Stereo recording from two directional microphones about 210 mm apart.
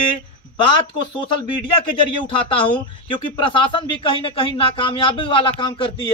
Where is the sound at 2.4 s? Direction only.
25° left (ahead or behind).